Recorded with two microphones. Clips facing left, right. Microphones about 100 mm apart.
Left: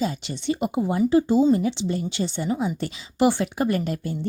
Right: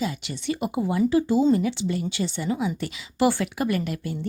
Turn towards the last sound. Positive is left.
turn(degrees=30)  # may be behind; listen again after turning